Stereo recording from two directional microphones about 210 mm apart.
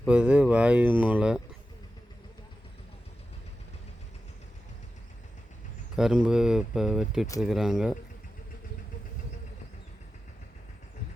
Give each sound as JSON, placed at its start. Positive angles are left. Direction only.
{"t": 0.0, "sound": "speech", "side_deg": -5}
{"t": 6.0, "sound": "speech", "side_deg": 0}